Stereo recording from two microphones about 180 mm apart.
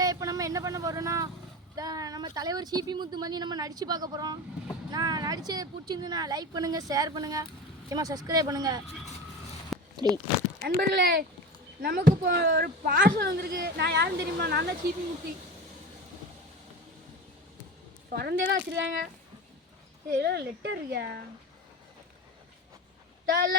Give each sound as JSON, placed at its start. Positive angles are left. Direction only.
{"t": 0.0, "sound": "vehicle", "side_deg": -20}
{"t": 1.7, "sound": "a woman's voice", "side_deg": -20}
{"t": 9.7, "sound": "a sound", "side_deg": 0}
{"t": 10.8, "sound": "speech", "side_deg": -60}
{"t": 18.1, "sound": "speech", "side_deg": -60}
{"t": 20.1, "sound": "speech", "side_deg": -65}
{"t": 23.3, "sound": "speech", "side_deg": -60}